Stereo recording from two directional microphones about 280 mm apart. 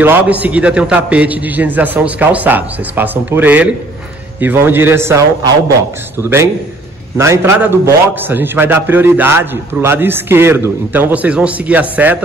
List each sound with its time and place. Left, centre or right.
0.0 s a man's voice: centre
7.2 s a man's voice: centre